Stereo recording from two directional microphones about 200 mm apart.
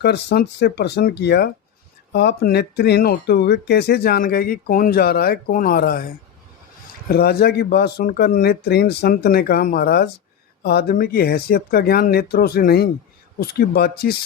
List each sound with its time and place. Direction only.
0.0 s speech: 55° left (ahead or behind)
7.1 s speech: 50° left (ahead or behind)